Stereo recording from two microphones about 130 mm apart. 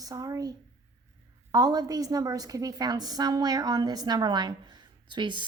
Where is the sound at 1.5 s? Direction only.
30° right (ahead or behind).